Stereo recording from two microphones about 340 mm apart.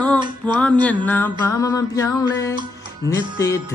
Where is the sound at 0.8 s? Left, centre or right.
Centre.